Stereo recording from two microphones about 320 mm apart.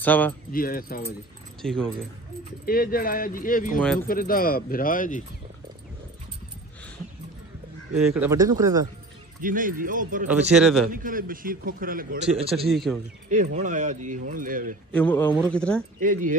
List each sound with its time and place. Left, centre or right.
0.0 s speech: centre
0.5 s speech: left
1.6 s speech: centre
2.6 s speech: left
8.0 s speech: centre
9.4 s speech: right
10.5 s speech: centre
10.9 s speech: right
12.6 s speech: centre
13.3 s speech: right
14.9 s speech: centre
16.0 s speech: right